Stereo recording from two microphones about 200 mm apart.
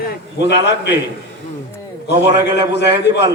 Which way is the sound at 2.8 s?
55° left (ahead or behind).